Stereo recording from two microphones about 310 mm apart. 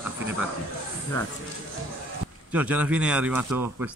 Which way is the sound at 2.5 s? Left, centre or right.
Centre.